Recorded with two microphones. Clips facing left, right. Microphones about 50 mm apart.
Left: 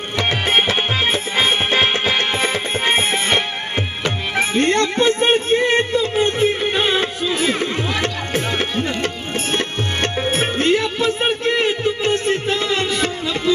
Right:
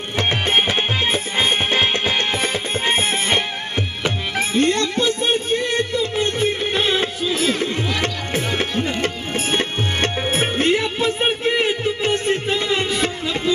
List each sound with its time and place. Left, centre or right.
0.7 s music: centre; by 5.9 s left
6.4 s music: centre
7.3 s a sound: centre
8.0 s music: centre
9.0 s music: centre
10.1 s music: centre